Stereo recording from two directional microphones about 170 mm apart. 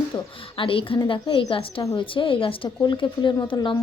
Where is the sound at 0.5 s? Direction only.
30° left (ahead or behind).